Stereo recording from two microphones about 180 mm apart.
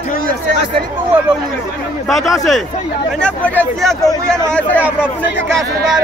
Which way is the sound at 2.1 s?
Centre (ahead or behind).